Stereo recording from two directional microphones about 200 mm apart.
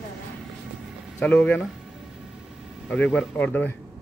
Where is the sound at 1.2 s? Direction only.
5° left (ahead or behind).